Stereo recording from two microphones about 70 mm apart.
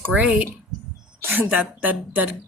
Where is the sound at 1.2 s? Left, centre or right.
Right.